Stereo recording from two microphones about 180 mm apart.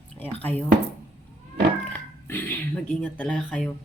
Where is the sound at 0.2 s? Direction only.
10° left (ahead or behind).